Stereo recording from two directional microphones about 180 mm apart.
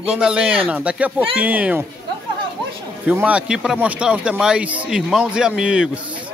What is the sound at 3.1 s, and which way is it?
Speech, 10° right (ahead or behind).